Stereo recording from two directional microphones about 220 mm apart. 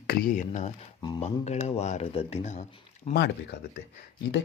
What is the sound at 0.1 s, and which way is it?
Speech, 40° left (ahead or behind).